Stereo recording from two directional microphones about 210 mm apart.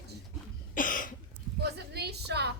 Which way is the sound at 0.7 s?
40° left (ahead or behind).